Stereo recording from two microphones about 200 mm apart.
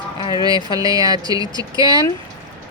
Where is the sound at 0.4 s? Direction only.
20° right (ahead or behind).